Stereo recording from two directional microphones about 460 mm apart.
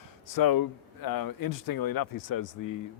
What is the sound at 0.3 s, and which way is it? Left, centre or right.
Speech, left.